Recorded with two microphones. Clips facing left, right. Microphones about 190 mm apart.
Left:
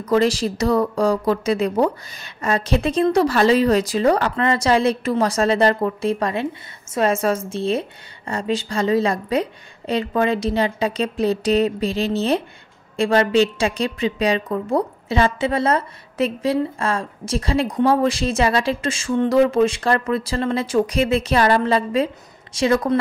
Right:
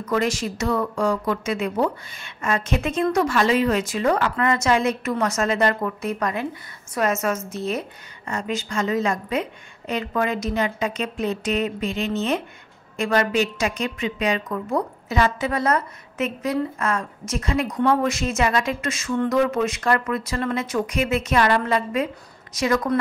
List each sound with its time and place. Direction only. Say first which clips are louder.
0.0 s a woman's voice: left 5 dB; 30° left (ahead or behind)